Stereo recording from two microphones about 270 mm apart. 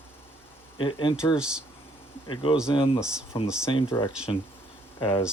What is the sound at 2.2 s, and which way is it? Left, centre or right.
Speech, centre.